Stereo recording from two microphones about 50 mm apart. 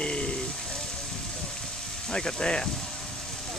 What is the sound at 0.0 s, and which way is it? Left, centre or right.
Music, left.